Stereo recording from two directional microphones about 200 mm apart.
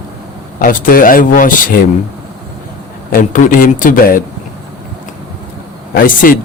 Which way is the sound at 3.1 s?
45° left (ahead or behind).